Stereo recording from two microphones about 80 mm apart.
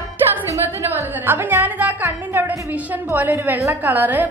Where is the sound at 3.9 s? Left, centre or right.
Right.